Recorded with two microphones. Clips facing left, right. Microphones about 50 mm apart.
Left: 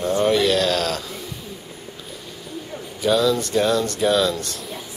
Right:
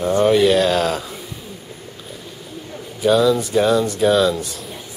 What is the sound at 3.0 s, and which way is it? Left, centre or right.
Speech, centre.